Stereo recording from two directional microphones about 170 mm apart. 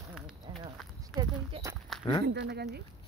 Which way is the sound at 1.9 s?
Centre (ahead or behind).